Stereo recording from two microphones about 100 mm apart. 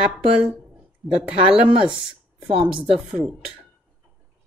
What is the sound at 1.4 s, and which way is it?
Speech, 70° right (ahead or behind).